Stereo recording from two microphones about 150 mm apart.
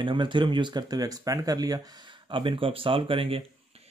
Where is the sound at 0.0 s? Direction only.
35° right (ahead or behind).